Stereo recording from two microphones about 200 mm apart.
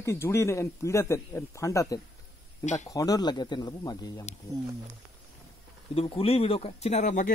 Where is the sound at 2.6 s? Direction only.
35° left (ahead or behind).